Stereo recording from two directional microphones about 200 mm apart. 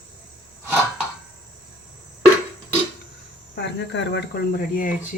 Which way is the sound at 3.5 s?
60° left (ahead or behind).